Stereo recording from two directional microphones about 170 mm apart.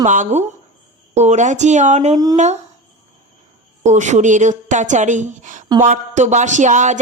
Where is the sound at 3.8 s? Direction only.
45° right (ahead or behind).